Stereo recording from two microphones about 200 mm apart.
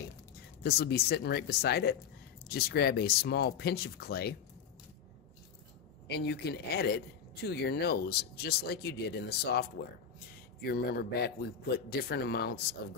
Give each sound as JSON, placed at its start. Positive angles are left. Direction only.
{"t": 0.7, "sound": "speech", "side_deg": 50}
{"t": 6.0, "sound": "speech", "side_deg": 55}